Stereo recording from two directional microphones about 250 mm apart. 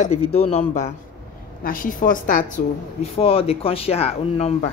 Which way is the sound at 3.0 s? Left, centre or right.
Left.